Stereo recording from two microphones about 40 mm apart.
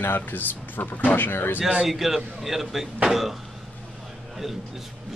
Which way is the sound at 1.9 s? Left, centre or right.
Centre.